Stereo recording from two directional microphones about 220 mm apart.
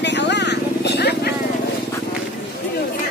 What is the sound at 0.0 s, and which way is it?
Vehicle, 50° left (ahead or behind).